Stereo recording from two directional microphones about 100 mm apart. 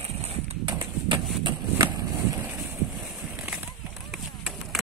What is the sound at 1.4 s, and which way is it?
Skateboard, 40° right (ahead or behind).